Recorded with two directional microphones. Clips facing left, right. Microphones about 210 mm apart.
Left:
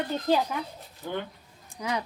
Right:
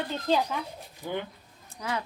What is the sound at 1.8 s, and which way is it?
Speech, 15° left (ahead or behind).